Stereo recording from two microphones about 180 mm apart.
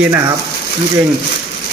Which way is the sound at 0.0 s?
15° right (ahead or behind).